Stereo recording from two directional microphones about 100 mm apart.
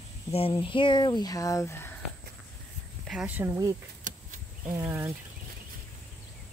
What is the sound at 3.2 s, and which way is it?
Speech, 15° right (ahead or behind).